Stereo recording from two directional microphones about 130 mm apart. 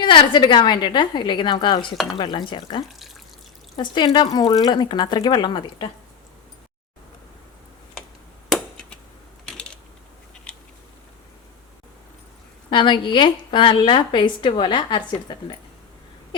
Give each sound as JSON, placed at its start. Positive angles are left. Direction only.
{"t": 0.0, "sound": "a woman's voice", "side_deg": 35}
{"t": 8.4, "sound": "a sound", "side_deg": 5}
{"t": 9.5, "sound": "mechanisms", "side_deg": 5}
{"t": 12.7, "sound": "a woman's voice", "side_deg": 35}